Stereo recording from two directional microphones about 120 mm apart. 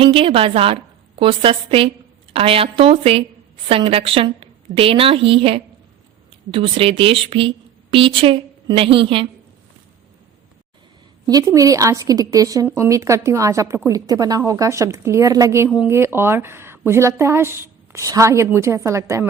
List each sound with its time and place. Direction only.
0.0 s a woman's voice: 45° right (ahead or behind)
11.3 s a woman's voice: 30° right (ahead or behind)